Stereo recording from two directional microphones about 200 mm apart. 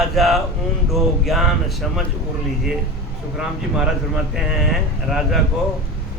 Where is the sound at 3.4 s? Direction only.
Centre (ahead or behind).